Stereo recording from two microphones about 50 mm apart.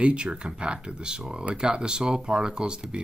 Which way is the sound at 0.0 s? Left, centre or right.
Right.